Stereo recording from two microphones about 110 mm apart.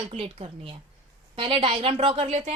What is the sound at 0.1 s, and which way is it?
Speech, 60° right (ahead or behind).